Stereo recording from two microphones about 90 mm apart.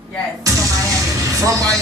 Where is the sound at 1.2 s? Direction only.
40° right (ahead or behind).